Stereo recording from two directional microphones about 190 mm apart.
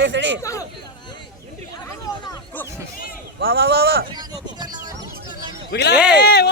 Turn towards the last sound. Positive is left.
turn(degrees=60)  # may be behind; listen again after turning